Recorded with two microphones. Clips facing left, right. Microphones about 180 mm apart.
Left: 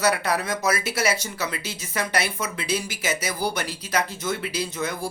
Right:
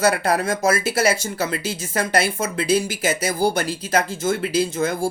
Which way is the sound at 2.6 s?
30° right (ahead or behind).